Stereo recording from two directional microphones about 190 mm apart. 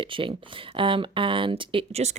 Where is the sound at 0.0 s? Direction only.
25° right (ahead or behind).